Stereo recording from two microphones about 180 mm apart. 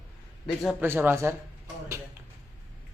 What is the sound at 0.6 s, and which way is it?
Speech, centre (ahead or behind).